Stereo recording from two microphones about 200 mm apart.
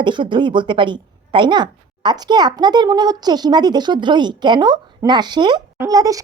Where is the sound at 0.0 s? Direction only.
25° right (ahead or behind).